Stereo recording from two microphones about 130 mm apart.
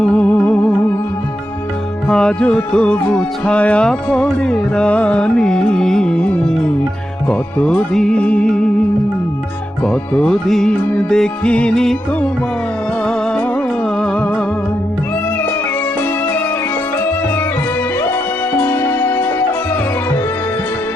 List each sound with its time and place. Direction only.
0.0 s music: 10° left (ahead or behind)
2.0 s music: 5° left (ahead or behind)
9.8 s music: 5° left (ahead or behind)
14.0 s music: 10° left (ahead or behind)
18.6 s music: 15° left (ahead or behind)